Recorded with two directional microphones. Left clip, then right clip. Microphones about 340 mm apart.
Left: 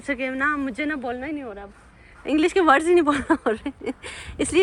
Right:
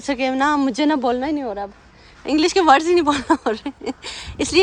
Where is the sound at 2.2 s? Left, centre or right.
Centre.